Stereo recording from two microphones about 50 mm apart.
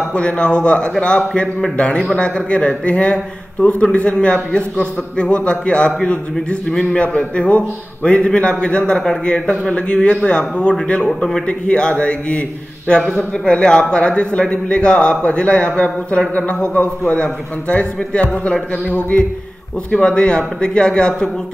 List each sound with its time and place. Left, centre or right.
0.1 s a man's voice: left
18.2 s a man's voice: left